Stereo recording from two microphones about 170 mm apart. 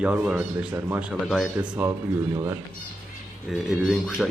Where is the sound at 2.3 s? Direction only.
15° right (ahead or behind).